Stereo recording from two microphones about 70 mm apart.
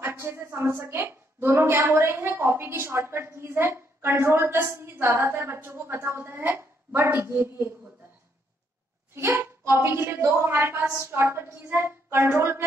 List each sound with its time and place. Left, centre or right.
0.0 s a woman's voice: right
9.1 s a woman's voice: right